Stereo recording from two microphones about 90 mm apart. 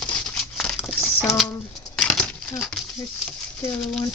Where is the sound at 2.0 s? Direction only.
5° left (ahead or behind).